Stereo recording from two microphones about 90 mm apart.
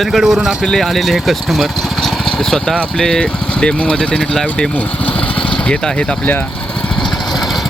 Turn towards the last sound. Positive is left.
turn(degrees=15)  # may be behind; listen again after turning